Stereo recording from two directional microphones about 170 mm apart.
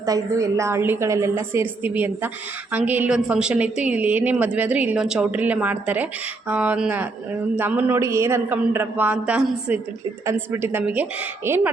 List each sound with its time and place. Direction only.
0.0 s a woman's voice: 20° right (ahead or behind)